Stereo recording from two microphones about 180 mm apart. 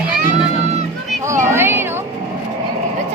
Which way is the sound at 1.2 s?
15° right (ahead or behind).